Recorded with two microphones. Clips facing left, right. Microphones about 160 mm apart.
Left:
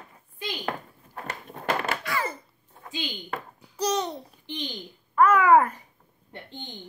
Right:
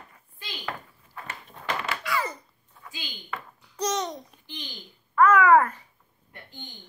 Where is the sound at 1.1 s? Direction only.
45° left (ahead or behind).